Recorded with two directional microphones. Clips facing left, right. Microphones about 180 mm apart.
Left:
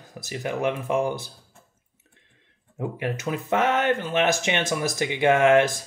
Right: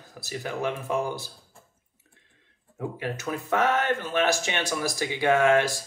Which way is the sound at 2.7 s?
20° left (ahead or behind).